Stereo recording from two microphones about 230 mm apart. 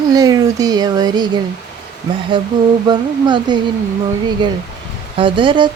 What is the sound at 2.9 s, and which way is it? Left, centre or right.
Speech, centre.